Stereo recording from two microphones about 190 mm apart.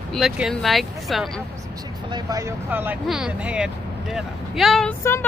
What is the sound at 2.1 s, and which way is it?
Speech, 15° right (ahead or behind).